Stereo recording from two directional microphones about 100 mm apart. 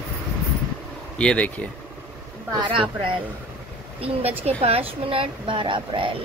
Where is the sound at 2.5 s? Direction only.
55° right (ahead or behind).